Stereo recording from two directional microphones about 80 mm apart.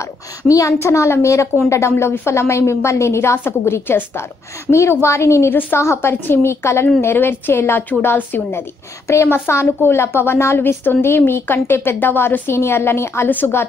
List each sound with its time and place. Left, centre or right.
0.4 s a woman's voice: left